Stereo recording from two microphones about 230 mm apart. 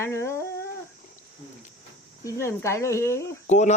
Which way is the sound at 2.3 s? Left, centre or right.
Centre.